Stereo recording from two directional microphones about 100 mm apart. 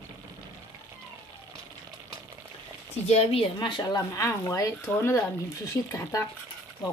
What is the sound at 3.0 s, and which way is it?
Speech, 85° left.